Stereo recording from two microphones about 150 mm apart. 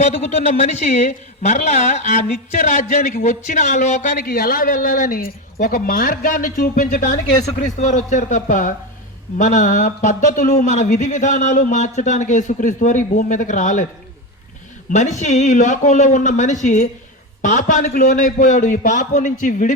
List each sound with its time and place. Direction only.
0.0 s a man's voice: 50° left (ahead or behind)
14.8 s a man's voice: 55° left (ahead or behind)